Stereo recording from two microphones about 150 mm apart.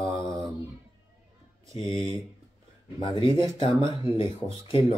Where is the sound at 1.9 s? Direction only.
35° left (ahead or behind).